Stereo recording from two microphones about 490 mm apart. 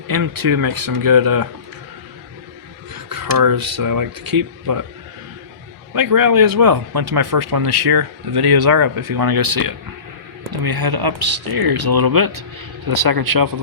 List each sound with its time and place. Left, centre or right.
0.1 s speech: right
2.9 s speech: right
5.9 s speech: right